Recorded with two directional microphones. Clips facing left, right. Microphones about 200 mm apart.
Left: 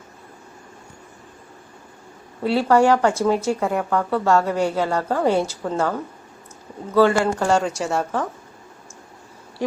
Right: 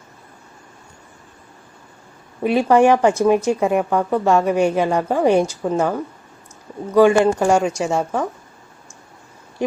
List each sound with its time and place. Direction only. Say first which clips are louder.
2.4 s speech: right 3 dB; 15° right (ahead or behind)